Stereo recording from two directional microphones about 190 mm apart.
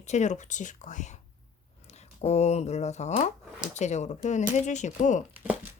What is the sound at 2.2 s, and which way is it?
A woman's voice, 35° left (ahead or behind).